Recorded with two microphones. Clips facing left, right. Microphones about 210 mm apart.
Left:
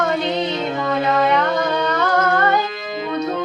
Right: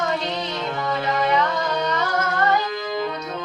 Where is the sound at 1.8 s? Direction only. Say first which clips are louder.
Left 5 dB; 60° left (ahead or behind).